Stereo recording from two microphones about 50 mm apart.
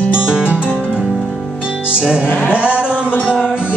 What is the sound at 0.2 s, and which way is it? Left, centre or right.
Music, right.